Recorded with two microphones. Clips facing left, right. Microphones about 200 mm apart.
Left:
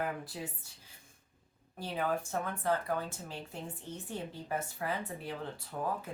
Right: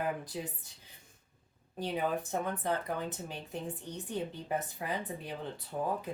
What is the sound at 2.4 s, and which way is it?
Speech, 20° right (ahead or behind).